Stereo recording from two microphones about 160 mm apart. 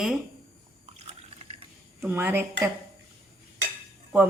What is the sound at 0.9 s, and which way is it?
Liquid, 40° right (ahead or behind).